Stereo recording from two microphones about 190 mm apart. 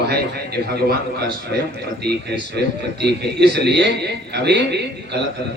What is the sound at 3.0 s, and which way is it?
A man's voice, 60° right (ahead or behind).